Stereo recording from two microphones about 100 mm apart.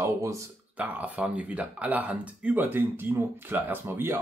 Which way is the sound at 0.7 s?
15° right (ahead or behind).